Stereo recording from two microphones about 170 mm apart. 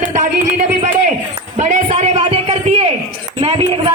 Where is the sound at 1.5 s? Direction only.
45° right (ahead or behind).